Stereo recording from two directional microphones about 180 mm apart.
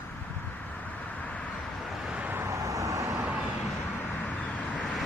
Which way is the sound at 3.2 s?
10° right (ahead or behind).